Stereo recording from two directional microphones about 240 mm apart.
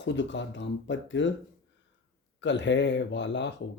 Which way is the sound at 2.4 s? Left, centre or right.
Left.